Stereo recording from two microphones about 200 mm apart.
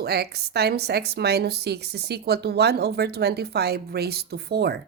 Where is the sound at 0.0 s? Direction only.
55° right (ahead or behind).